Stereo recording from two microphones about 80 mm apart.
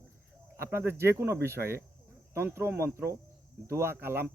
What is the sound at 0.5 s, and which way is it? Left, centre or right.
Speech, right.